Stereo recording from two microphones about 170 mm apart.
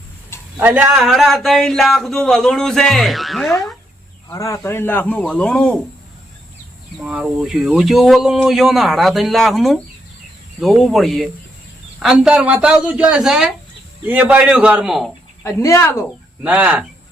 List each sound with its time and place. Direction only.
0.5 s speech: 10° right (ahead or behind)
4.3 s speech: 20° left (ahead or behind)
7.0 s speech: 5° right (ahead or behind)
15.4 s speech: 15° left (ahead or behind)
16.4 s speech: 5° right (ahead or behind)